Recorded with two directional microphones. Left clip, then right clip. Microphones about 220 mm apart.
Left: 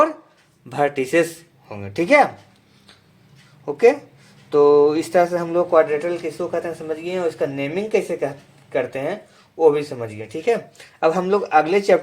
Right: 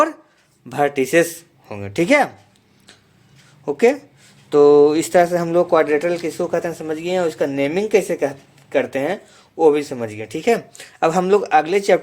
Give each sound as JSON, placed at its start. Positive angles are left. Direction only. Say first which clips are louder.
{"t": 0.7, "sound": "speech", "louder": "right 2 dB", "side_deg": -25}
{"t": 3.7, "sound": "speech", "louder": "left 1 dB", "side_deg": -35}